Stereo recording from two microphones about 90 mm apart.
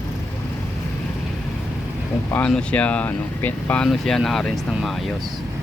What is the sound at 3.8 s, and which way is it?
Speech, 5° left (ahead or behind).